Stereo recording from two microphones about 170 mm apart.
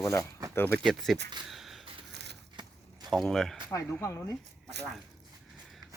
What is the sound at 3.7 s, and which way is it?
Speech, 15° left (ahead or behind).